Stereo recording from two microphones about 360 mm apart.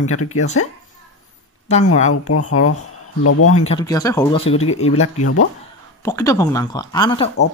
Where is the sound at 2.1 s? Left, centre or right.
Left.